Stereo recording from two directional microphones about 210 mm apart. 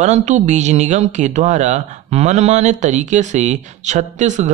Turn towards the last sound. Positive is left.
turn(degrees=-35)  # may be behind; listen again after turning